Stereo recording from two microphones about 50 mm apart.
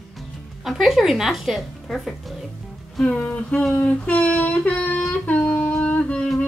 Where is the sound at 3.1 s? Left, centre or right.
Left.